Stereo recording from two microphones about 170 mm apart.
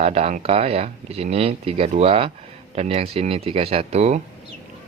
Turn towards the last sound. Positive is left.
turn(degrees=-40)  # may be behind; listen again after turning